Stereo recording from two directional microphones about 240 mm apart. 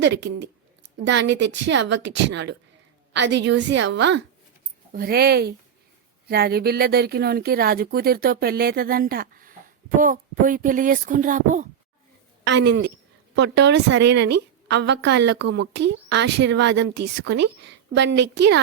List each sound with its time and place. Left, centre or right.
0.0 s a woman's voice: right
12.6 s a woman's voice: right